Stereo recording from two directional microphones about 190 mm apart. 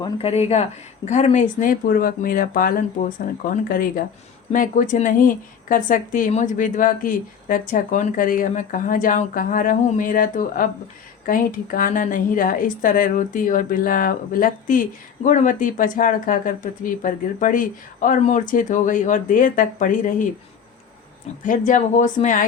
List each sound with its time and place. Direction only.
0.0 s a woman's voice: 30° left (ahead or behind)
21.4 s a woman's voice: 45° left (ahead or behind)